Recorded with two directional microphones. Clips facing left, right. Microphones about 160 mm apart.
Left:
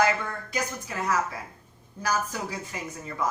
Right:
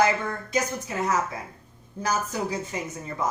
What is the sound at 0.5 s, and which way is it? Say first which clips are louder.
Speech: right 4 dB; 25° right (ahead or behind).